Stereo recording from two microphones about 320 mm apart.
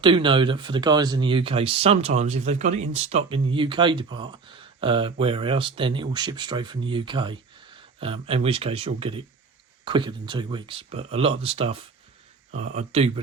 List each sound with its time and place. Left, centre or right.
0.0 s speech: centre